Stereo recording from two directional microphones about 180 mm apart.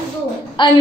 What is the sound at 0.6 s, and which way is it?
Speech, 25° left (ahead or behind).